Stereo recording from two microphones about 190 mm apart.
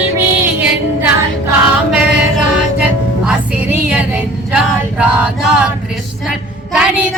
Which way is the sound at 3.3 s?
5° right (ahead or behind).